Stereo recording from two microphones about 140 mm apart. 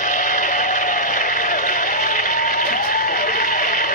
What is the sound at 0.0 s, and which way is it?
Sheep, 75° left (ahead or behind).